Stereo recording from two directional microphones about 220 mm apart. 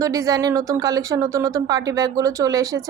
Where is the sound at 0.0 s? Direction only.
15° right (ahead or behind).